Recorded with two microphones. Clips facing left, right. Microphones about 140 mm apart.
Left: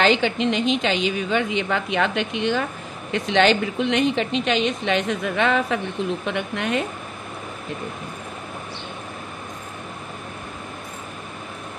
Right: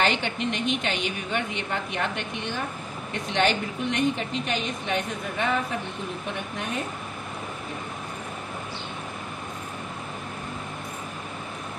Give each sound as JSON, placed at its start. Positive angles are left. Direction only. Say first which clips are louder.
{"t": 0.0, "sound": "a woman's voice", "louder": "left 6 dB", "side_deg": 90}
{"t": 6.2, "sound": "a woman's voice", "louder": "left 6 dB", "side_deg": 80}